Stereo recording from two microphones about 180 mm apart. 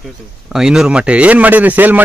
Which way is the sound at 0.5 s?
5° right (ahead or behind).